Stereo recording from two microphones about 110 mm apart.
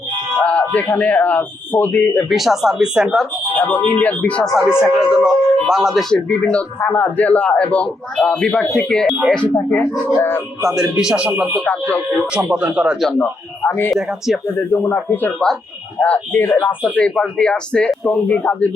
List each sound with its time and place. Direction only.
0.4 s speech: 10° left (ahead or behind)
2.3 s speech: centre (ahead or behind)
3.6 s a man's voice: 15° left (ahead or behind)
4.5 s speech: 5° right (ahead or behind)
6.2 s a man's voice: 10° left (ahead or behind)
9.6 s a man's voice: 20° left (ahead or behind)
10.8 s speech: 5° right (ahead or behind)
11.6 s a man's voice: 15° left (ahead or behind)
12.5 s speech: 10° right (ahead or behind)
14.7 s a man's voice: 20° left (ahead or behind)